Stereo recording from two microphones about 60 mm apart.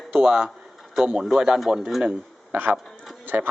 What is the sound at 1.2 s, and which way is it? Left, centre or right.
Speech, centre.